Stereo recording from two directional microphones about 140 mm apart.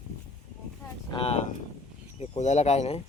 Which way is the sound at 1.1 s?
45° left (ahead or behind).